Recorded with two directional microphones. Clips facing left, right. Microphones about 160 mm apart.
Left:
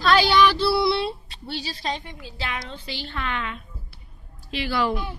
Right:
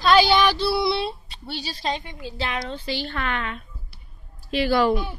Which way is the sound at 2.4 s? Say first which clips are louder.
Right 4 dB; 30° right (ahead or behind).